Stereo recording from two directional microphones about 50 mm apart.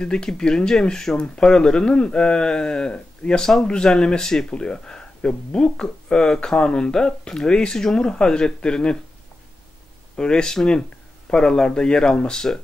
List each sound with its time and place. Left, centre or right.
0.0 s speech: centre
10.1 s speech: centre